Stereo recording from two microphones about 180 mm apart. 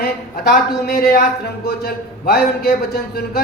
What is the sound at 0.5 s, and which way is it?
Speech, 60° left (ahead or behind).